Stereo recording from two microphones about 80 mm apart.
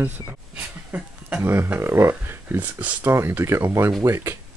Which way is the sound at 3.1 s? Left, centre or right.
Right.